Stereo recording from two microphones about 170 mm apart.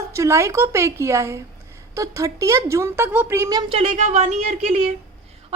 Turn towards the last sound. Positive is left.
turn(degrees=-40)  # may be behind; listen again after turning